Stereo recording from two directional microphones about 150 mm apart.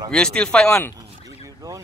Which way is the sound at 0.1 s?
5° left (ahead or behind).